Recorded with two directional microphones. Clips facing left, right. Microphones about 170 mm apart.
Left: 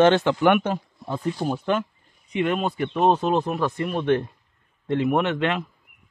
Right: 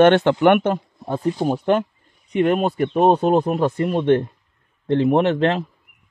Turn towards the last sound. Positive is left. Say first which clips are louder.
# right 5 dB
turn(degrees=-35)  # may be behind; listen again after turning